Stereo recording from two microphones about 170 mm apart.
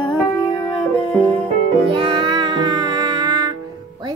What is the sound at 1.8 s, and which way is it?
Music, 30° right (ahead or behind).